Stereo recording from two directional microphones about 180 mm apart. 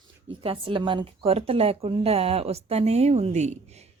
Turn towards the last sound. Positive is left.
turn(degrees=-35)  # may be behind; listen again after turning